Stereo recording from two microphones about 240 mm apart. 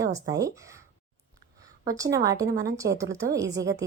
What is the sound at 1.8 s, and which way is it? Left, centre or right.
Speech, centre.